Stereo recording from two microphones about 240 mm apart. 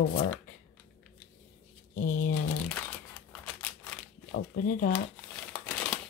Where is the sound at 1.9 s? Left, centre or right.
Left.